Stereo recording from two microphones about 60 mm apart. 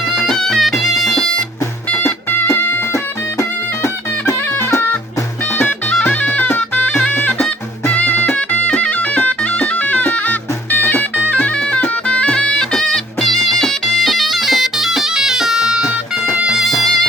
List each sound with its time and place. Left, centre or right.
0.2 s music: centre
1.9 s music: left
5.5 s music: left; by 15.9 s centre
16.3 s music: right
16.6 s music: centre